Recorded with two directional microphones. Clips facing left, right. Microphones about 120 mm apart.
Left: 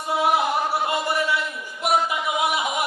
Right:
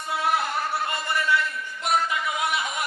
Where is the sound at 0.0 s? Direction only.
20° left (ahead or behind).